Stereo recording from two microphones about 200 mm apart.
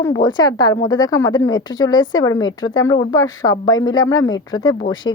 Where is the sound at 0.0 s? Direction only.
15° left (ahead or behind).